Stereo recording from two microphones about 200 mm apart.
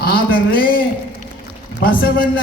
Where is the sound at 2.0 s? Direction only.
45° left (ahead or behind).